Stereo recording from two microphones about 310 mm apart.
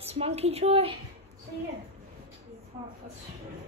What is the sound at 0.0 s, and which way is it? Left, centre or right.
Speech, centre.